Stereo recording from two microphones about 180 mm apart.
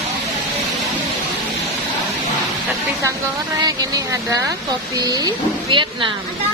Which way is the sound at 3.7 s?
20° right (ahead or behind).